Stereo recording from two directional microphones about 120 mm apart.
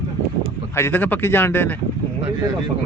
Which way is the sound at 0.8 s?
15° left (ahead or behind).